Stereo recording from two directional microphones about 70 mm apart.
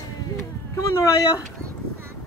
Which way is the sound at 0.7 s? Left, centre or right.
Left.